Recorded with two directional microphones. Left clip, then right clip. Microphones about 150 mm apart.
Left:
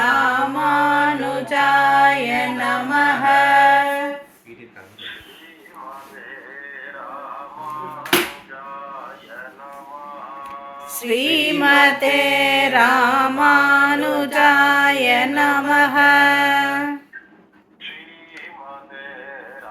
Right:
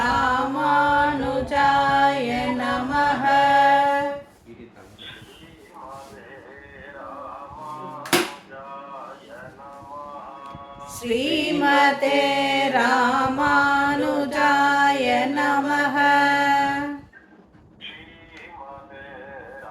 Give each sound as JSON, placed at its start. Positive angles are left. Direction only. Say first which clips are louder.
{"t": 0.0, "sound": "music", "louder": "left 4 dB", "side_deg": -5}
{"t": 10.8, "sound": "music", "louder": "left 4 dB", "side_deg": 15}
{"t": 12.3, "sound": "mantra", "louder": "left 5 dB", "side_deg": 10}
{"t": 12.9, "sound": "music", "louder": "left 4 dB", "side_deg": 0}
{"t": 15.7, "sound": "mantra", "louder": "left 7 dB", "side_deg": 10}